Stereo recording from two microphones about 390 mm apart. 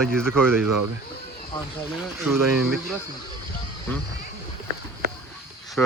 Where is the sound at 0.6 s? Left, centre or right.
Right.